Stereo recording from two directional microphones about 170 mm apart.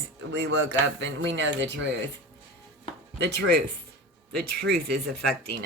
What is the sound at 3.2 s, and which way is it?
Speech, 85° right.